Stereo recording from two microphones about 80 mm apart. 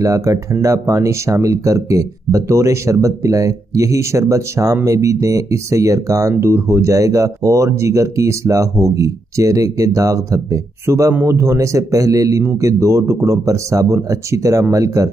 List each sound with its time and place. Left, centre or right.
0.0 s speech: right